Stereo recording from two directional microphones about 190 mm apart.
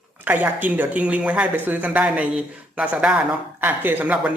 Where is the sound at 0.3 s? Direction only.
10° right (ahead or behind).